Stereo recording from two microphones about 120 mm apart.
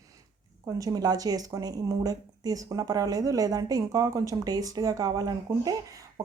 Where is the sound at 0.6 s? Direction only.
30° right (ahead or behind).